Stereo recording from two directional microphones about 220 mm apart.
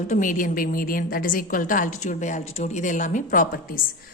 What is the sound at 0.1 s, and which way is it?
A woman's voice, 35° left (ahead or behind).